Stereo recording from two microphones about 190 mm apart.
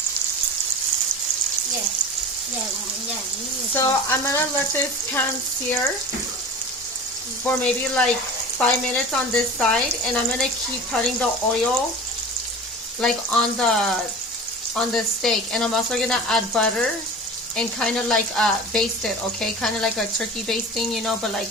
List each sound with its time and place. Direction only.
3.8 s frying: 15° left (ahead or behind)
7.4 s frying: 5° left (ahead or behind)
8.5 s speech: 5° left (ahead or behind)
13.0 s speech: 5° left (ahead or behind)